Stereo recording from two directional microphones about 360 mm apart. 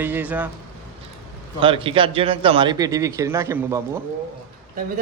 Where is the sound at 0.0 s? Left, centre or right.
Centre.